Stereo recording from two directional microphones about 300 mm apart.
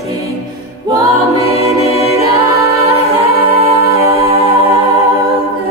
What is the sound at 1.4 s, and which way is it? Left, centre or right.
Music, centre.